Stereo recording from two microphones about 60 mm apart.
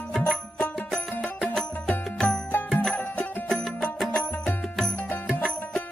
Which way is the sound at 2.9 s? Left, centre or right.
Left.